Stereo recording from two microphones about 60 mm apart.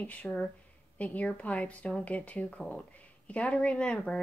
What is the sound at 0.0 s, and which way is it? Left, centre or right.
Speech, left.